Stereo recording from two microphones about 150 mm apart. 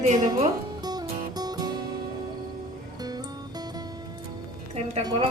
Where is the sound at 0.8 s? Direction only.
25° right (ahead or behind).